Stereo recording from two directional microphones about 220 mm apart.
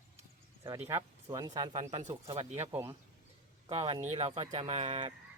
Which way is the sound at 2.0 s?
30° right (ahead or behind).